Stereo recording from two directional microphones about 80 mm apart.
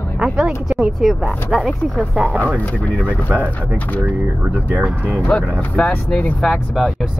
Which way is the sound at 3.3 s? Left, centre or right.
Right.